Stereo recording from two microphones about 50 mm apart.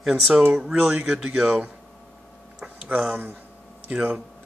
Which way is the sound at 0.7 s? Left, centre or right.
Right.